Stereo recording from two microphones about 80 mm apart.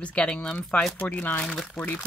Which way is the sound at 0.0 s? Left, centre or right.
Centre.